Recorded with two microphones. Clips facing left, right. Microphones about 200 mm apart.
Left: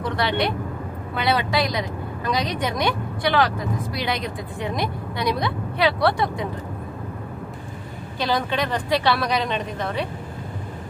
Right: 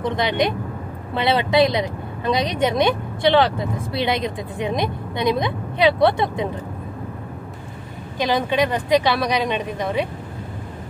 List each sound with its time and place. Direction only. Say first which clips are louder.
0.0 s speech: right 3 dB; 20° right (ahead or behind)
8.2 s speech: right 4 dB; 15° right (ahead or behind)